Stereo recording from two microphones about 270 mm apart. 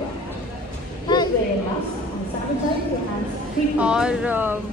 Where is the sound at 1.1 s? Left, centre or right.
Centre.